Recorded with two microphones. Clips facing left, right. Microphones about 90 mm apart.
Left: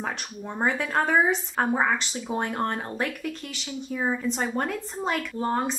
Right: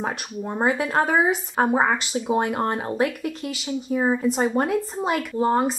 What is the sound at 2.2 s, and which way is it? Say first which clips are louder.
A woman's voice: right 5 dB; 10° right (ahead or behind).